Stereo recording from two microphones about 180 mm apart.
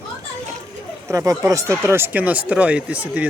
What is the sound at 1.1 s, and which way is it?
Speech, 15° right (ahead or behind).